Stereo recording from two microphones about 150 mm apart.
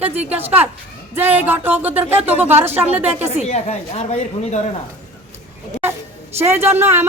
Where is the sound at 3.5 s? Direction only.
45° left (ahead or behind).